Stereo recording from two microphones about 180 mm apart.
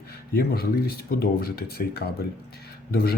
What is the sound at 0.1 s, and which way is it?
A man's voice, 60° left (ahead or behind).